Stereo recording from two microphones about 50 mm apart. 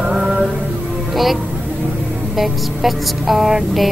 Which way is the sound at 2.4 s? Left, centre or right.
Centre.